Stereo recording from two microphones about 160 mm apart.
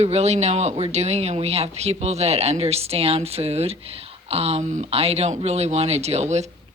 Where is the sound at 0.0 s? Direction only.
40° right (ahead or behind).